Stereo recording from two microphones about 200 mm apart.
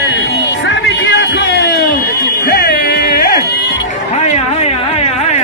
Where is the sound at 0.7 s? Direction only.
65° left (ahead or behind).